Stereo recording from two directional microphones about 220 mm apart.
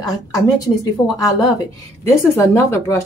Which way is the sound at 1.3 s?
15° left (ahead or behind).